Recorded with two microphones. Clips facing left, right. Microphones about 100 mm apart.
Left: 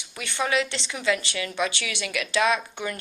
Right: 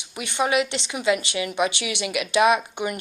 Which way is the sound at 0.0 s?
20° right (ahead or behind).